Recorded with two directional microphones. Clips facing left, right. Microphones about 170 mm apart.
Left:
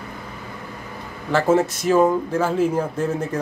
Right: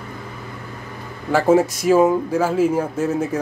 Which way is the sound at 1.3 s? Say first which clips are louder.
Right 3 dB; 10° right (ahead or behind).